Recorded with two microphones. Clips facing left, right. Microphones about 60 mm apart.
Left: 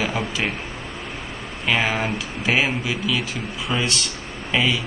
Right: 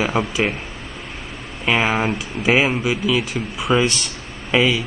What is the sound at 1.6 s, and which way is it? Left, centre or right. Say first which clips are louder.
Speech: right 3 dB; centre.